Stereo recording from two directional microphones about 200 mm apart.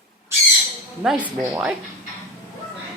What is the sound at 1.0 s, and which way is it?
Speech, 5° right (ahead or behind).